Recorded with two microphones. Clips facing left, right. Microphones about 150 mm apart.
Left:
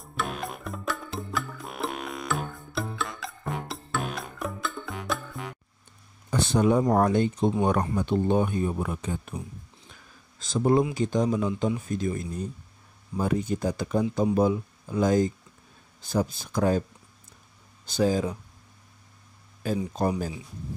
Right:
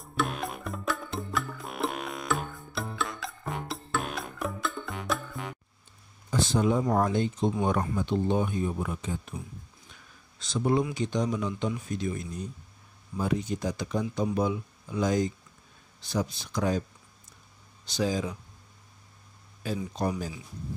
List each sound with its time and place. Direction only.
0.0 s music: centre (ahead or behind)
6.3 s a sound: 65° left (ahead or behind)
6.8 s speech: 45° left (ahead or behind)
7.1 s speech: 60° left (ahead or behind)
10.4 s speech: 45° left (ahead or behind)
14.2 s speech: 40° left (ahead or behind)
17.9 s speech: 50° left (ahead or behind)
19.6 s speech: 50° left (ahead or behind)